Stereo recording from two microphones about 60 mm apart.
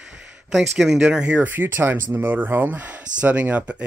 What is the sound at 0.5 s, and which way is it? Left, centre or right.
Speech, centre.